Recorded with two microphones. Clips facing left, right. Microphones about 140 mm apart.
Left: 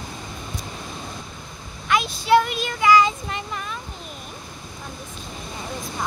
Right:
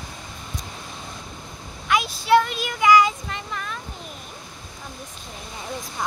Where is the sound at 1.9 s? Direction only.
10° right (ahead or behind).